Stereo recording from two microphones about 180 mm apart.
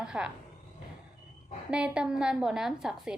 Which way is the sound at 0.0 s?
5° right (ahead or behind).